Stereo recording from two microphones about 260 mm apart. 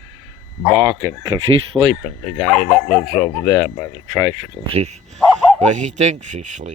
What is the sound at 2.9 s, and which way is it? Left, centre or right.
Speech, centre.